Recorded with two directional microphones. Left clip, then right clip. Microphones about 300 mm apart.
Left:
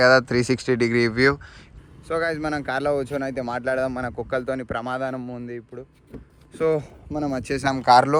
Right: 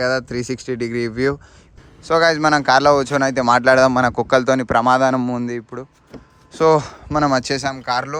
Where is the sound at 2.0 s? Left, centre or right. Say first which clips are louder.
Right 9 dB; centre.